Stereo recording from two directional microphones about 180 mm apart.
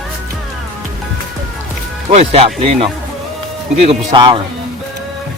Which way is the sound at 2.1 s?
35° right (ahead or behind).